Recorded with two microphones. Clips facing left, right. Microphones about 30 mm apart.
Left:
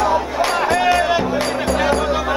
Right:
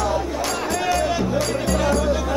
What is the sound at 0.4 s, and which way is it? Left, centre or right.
Music, left.